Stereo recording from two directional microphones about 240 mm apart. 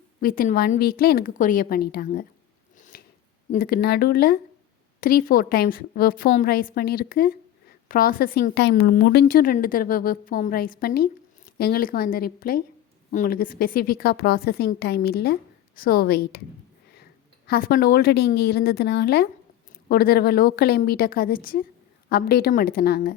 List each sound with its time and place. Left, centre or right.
0.2 s a woman's voice: left
2.9 s scissors: left
3.5 s a woman's voice: left